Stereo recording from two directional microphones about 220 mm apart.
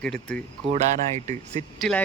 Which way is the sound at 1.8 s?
5° left (ahead or behind).